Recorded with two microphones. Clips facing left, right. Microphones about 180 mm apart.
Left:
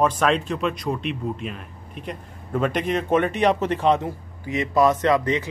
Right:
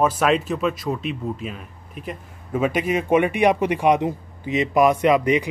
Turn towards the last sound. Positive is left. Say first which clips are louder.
# right 3 dB
turn(degrees=-15)  # may be behind; listen again after turning